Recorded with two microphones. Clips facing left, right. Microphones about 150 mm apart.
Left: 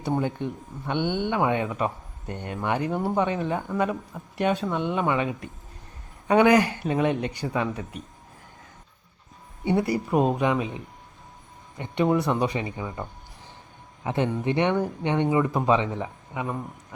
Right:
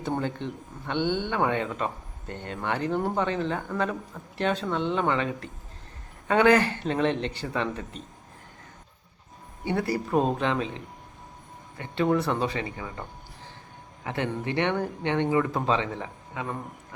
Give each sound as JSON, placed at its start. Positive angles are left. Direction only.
{"t": 0.0, "sound": "speech", "side_deg": 15}
{"t": 9.6, "sound": "speech", "side_deg": 15}